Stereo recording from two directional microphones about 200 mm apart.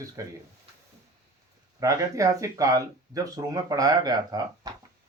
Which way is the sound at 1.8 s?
15° right (ahead or behind).